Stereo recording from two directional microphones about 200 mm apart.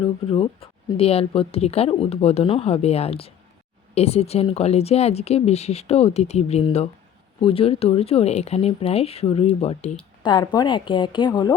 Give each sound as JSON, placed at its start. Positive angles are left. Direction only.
{"t": 0.0, "sound": "speech", "side_deg": 25}